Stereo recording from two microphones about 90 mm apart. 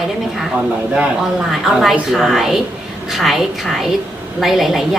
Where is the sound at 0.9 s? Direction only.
5° right (ahead or behind).